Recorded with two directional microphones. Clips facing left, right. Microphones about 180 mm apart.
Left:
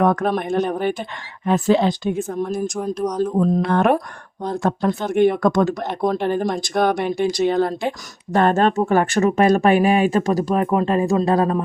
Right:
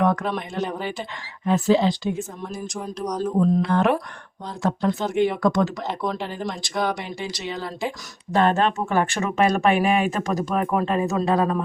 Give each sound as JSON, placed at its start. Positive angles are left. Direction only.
{"t": 0.0, "sound": "speech", "side_deg": 50}